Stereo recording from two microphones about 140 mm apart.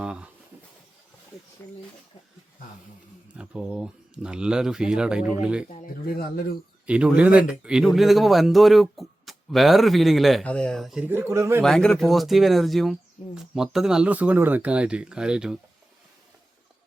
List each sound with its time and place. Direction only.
0.0 s a sound: 5° right (ahead or behind)
1.6 s speech: 15° left (ahead or behind)
3.3 s speech: 5° right (ahead or behind)
5.8 s speech: 90° left
6.8 s speech: 10° right (ahead or behind)
11.0 s speech: 15° right (ahead or behind)
11.6 s speech: 5° left (ahead or behind)